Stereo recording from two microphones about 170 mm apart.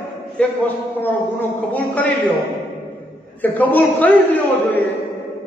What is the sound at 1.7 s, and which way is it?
Speech, 10° left (ahead or behind).